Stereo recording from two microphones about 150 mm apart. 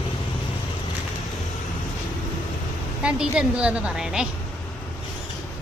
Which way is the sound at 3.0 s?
5° right (ahead or behind).